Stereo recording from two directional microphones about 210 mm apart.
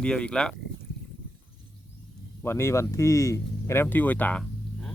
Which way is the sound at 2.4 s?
10° left (ahead or behind).